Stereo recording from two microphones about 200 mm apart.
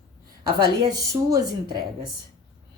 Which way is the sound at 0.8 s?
15° right (ahead or behind).